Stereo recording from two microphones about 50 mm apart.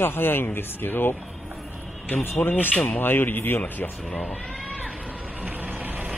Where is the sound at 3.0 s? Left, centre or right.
Left.